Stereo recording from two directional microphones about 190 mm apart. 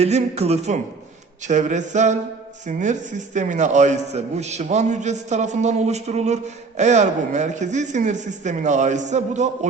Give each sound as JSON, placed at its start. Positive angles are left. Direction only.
{"t": 0.0, "sound": "a man's voice", "side_deg": -35}